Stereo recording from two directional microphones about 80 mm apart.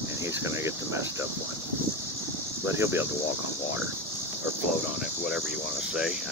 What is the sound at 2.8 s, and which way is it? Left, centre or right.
Speech, right.